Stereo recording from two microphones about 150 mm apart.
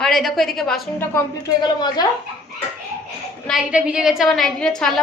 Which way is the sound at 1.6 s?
25° left (ahead or behind).